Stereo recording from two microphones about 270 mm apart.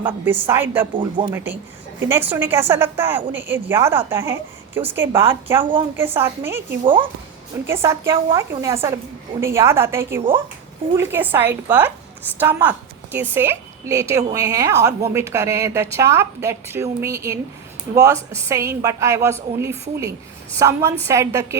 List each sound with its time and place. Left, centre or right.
0.0 s a woman's voice: centre